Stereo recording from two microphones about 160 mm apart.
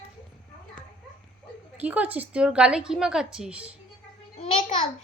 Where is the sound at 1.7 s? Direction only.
10° right (ahead or behind).